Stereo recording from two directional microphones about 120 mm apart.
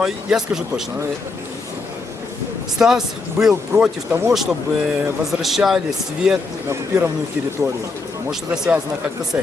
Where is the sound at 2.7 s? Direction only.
5° right (ahead or behind).